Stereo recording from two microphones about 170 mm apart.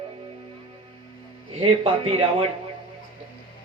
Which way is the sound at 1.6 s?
35° right (ahead or behind).